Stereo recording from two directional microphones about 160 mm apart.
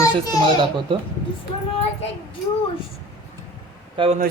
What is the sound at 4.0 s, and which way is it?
Speech, 30° right (ahead or behind).